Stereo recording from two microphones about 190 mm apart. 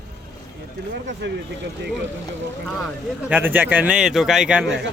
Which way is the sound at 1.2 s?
65° right (ahead or behind).